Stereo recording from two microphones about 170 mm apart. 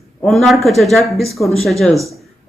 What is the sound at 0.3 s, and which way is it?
Speech, centre (ahead or behind).